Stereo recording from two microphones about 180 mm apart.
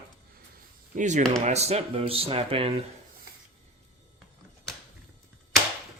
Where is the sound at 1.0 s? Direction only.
40° right (ahead or behind).